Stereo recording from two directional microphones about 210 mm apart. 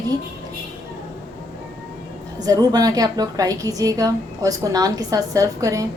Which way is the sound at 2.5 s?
15° right (ahead or behind).